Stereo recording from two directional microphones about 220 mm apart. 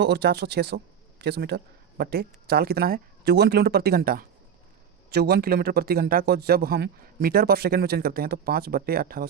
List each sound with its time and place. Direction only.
0.0 s a man's voice: 50° right (ahead or behind)